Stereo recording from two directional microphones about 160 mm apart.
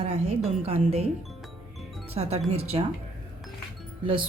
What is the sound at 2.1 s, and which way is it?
Speech, 40° right (ahead or behind).